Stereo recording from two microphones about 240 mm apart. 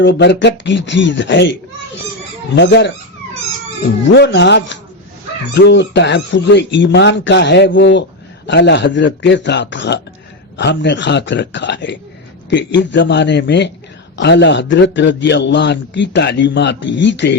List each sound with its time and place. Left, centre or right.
0.0 s a man's voice: left
2.6 s a man's voice: left
4.0 s a man's voice: left